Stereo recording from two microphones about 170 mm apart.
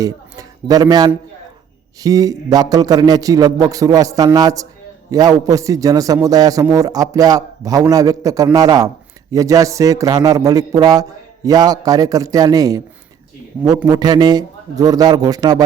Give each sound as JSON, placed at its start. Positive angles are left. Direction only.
{"t": 0.0, "sound": "a man's voice", "side_deg": -20}
{"t": 13.8, "sound": "a man's voice", "side_deg": -25}